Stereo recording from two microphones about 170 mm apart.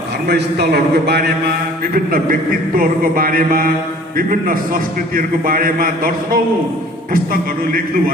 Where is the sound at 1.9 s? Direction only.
60° right (ahead or behind).